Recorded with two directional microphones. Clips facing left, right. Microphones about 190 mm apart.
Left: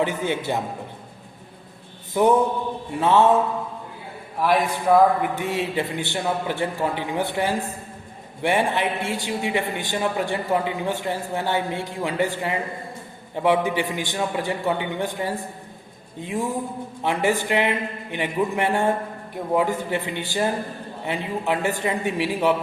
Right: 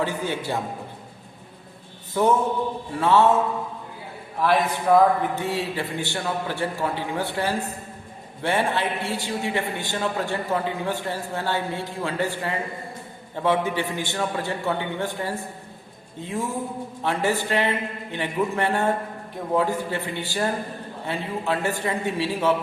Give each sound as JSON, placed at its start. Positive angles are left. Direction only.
{"t": 0.0, "sound": "a man's voice", "side_deg": 20}
{"t": 2.2, "sound": "a man's voice", "side_deg": 15}
{"t": 4.4, "sound": "a man's voice", "side_deg": 10}